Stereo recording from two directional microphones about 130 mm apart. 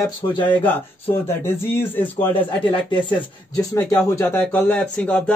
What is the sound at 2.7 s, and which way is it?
Speech, 35° left (ahead or behind).